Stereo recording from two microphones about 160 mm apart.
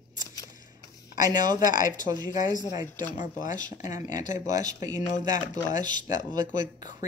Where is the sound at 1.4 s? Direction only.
25° right (ahead or behind).